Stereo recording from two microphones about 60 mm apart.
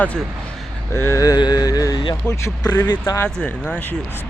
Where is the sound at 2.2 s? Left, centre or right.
Centre.